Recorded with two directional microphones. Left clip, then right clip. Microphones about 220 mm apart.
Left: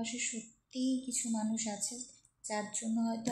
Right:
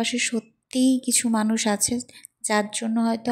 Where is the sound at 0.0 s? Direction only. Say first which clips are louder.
Right 15 dB; 40° right (ahead or behind).